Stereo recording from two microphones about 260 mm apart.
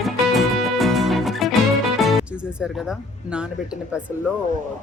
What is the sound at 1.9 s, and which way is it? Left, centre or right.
Speech, centre.